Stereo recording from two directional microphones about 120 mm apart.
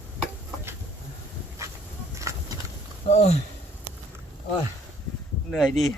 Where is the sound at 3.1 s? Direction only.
60° left (ahead or behind).